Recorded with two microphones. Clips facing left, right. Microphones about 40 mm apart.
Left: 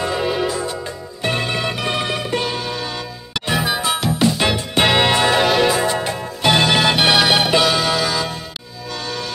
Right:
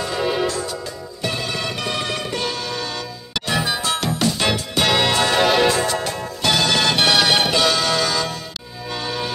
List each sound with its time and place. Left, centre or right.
0.1 s music: centre
1.2 s music: left
1.6 s music: centre
4.6 s music: left
5.3 s music: centre
5.9 s music: centre
8.9 s music: centre